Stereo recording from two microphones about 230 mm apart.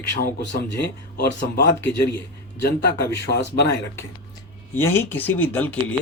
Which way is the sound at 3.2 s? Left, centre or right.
Left.